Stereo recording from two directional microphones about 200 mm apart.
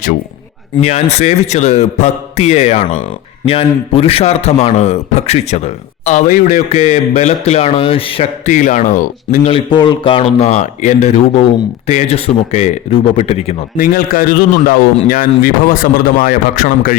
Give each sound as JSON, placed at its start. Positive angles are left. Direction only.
{"t": 0.8, "sound": "a man's voice", "side_deg": 35}
{"t": 9.5, "sound": "a man's voice", "side_deg": 25}
{"t": 13.7, "sound": "speech", "side_deg": 45}